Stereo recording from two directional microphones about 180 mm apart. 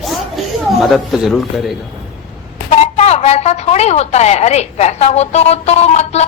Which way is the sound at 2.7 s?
35° left (ahead or behind).